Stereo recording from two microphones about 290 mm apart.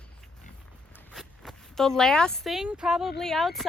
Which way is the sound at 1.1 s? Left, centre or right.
Centre.